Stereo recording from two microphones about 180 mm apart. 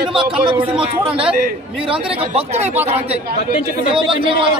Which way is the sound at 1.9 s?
30° right (ahead or behind).